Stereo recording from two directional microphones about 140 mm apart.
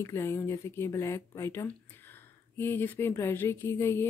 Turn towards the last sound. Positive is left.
turn(degrees=20)  # may be behind; listen again after turning